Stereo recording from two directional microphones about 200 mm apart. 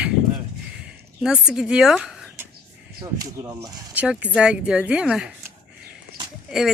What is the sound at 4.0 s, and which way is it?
Speech, 5° right (ahead or behind).